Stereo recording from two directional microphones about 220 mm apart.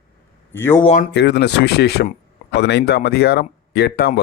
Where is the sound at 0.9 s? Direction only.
50° left (ahead or behind).